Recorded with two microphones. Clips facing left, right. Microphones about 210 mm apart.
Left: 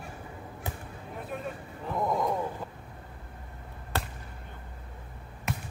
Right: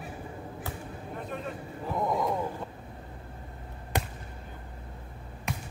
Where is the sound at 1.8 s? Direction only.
Centre (ahead or behind).